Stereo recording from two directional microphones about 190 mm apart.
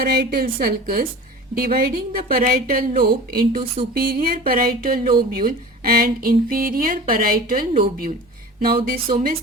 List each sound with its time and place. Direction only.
0.0 s a woman's voice: 55° right (ahead or behind)